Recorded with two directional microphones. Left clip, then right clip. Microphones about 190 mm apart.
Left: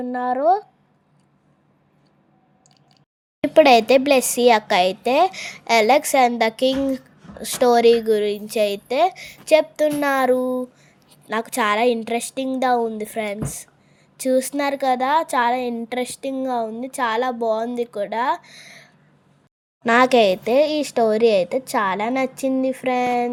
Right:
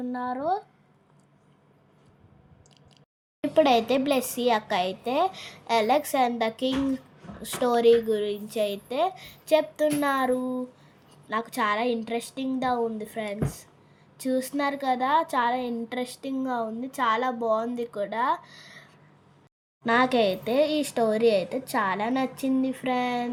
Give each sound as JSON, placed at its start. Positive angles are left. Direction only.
{"t": 0.0, "sound": "a woman's voice", "side_deg": 30}
{"t": 3.4, "sound": "a woman's voice", "side_deg": 35}